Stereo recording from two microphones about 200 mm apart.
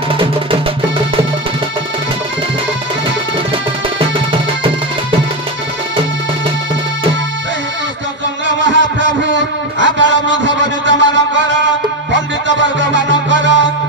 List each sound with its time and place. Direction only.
0.2 s music: 25° right (ahead or behind)
4.0 s music: 25° right (ahead or behind)
8.6 s a sound: 65° right (ahead or behind)
12.1 s music: 65° right (ahead or behind)